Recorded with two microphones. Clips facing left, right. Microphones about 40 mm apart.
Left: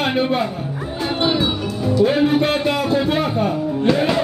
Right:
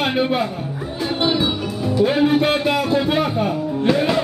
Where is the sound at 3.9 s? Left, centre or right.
Centre.